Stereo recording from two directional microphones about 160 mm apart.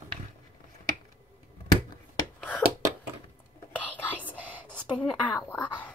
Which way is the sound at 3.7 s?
10° left (ahead or behind).